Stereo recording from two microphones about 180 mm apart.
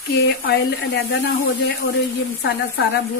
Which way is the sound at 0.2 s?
65° left (ahead or behind).